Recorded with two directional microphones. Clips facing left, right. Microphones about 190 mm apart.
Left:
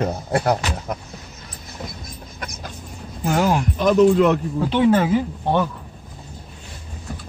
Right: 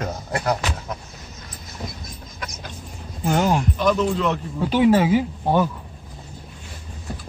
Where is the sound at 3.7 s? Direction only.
50° left (ahead or behind).